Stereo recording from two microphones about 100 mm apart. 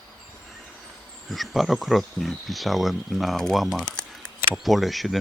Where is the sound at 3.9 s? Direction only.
10° left (ahead or behind).